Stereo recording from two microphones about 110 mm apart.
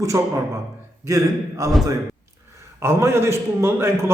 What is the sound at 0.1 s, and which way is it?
A man's voice, 30° right (ahead or behind).